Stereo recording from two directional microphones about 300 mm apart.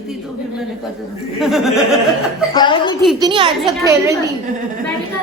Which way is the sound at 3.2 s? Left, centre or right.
Centre.